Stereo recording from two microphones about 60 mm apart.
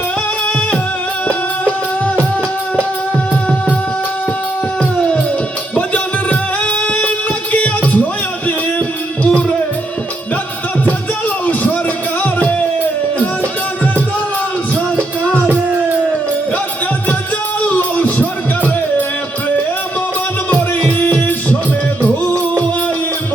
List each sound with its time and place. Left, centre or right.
4.8 s music: centre
6.8 s a sound: centre
7.5 s music: left
12.2 s music: left
17.7 s music: left
20.5 s music: left